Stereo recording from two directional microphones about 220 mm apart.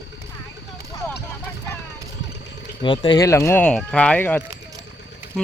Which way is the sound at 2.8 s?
20° left (ahead or behind).